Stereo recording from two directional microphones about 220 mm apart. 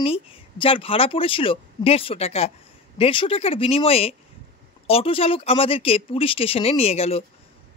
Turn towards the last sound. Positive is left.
turn(degrees=25)  # may be behind; listen again after turning